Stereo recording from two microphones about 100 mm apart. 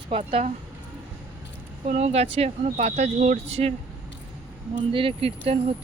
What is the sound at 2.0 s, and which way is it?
Speech, 90° right.